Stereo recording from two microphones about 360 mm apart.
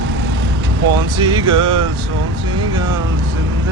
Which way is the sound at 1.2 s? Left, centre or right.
Centre.